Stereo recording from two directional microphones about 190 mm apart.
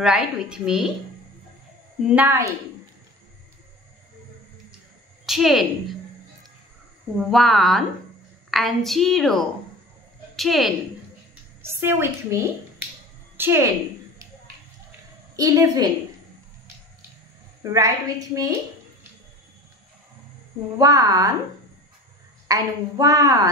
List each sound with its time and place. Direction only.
0.0 s a woman's voice: 5° right (ahead or behind)
2.0 s a woman's voice: 10° right (ahead or behind)
5.2 s a woman's voice: centre (ahead or behind)
7.2 s a woman's voice: centre (ahead or behind)
11.6 s a woman's voice: 15° right (ahead or behind)
15.3 s a woman's voice: 20° right (ahead or behind)
17.7 s a woman's voice: 15° right (ahead or behind)
20.7 s a woman's voice: 20° right (ahead or behind)
22.5 s a woman's voice: 20° right (ahead or behind)